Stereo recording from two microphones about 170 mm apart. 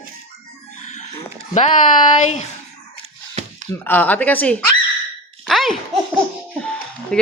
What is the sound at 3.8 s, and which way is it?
Speech, 10° left (ahead or behind).